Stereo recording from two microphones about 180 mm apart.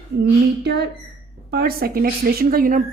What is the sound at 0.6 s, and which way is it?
Speech, 70° right (ahead or behind).